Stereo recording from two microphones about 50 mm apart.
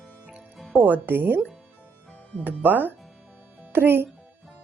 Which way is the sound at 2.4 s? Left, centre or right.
Right.